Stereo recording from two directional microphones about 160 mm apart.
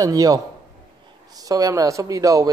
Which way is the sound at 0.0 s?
25° right (ahead or behind).